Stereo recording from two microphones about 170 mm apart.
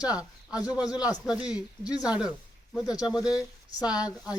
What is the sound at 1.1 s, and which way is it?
Speech, 5° right (ahead or behind).